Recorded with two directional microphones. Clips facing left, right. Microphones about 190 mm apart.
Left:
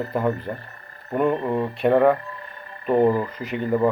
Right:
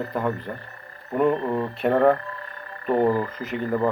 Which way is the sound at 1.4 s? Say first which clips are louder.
Left 2 dB; 15° left (ahead or behind).